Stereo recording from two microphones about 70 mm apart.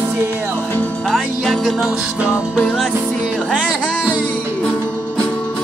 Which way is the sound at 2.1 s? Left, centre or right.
Centre.